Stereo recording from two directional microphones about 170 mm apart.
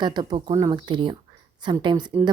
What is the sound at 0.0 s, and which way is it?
A woman's voice, 25° right (ahead or behind).